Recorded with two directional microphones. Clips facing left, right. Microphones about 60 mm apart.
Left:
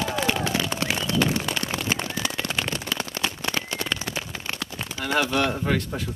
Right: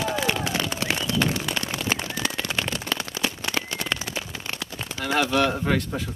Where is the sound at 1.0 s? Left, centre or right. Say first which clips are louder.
Left 2 dB; left.